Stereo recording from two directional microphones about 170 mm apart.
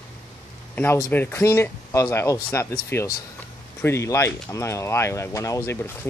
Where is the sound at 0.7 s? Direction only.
10° left (ahead or behind).